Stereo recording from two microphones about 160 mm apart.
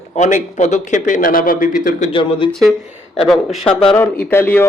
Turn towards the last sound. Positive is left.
turn(degrees=15)  # may be behind; listen again after turning